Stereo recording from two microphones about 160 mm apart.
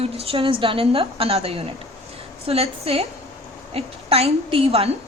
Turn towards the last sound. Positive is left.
turn(degrees=-40)  # may be behind; listen again after turning